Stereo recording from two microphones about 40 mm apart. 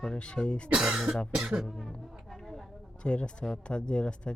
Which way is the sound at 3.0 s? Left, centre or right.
Left.